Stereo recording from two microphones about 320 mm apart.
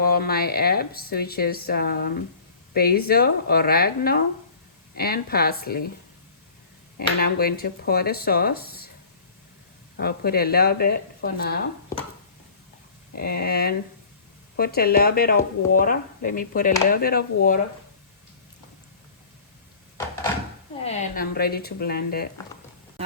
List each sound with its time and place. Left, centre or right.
0.0 s speech: left
7.2 s speech: left
10.0 s speech: left
13.1 s speech: left
20.8 s speech: left